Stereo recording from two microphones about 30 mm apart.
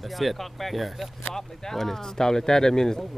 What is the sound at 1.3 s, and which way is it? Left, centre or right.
Speech, centre.